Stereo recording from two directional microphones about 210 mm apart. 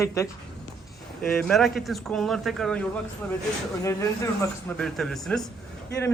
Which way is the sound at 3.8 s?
15° left (ahead or behind).